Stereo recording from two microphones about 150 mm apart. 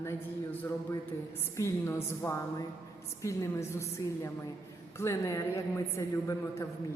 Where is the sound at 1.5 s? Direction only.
20° left (ahead or behind).